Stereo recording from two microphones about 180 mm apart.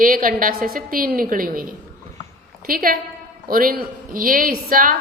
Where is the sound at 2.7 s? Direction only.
50° right (ahead or behind).